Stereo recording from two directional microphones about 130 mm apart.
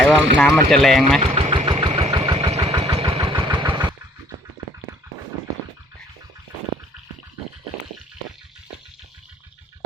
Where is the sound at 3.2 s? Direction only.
40° right (ahead or behind).